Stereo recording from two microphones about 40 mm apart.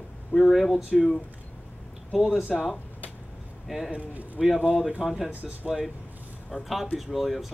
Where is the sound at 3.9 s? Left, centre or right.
Right.